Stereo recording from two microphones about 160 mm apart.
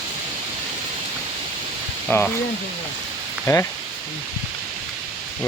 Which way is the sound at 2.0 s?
10° left (ahead or behind).